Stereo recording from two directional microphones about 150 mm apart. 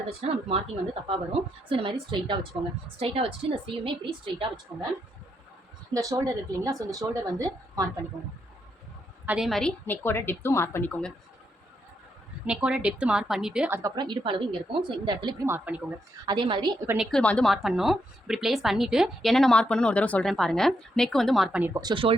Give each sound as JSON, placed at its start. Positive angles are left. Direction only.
{"t": 0.2, "sound": "speech", "side_deg": -40}
{"t": 1.7, "sound": "speech", "side_deg": -35}
{"t": 5.9, "sound": "a woman's voice", "side_deg": -25}
{"t": 9.2, "sound": "a woman's voice", "side_deg": -5}
{"t": 12.5, "sound": "a woman's voice", "side_deg": -5}
{"t": 13.7, "sound": "speech", "side_deg": -25}
{"t": 15.4, "sound": "a woman's voice", "side_deg": -10}
{"t": 16.2, "sound": "speech", "side_deg": -30}
{"t": 17.0, "sound": "a woman's voice", "side_deg": 5}
{"t": 21.6, "sound": "a woman's voice", "side_deg": -25}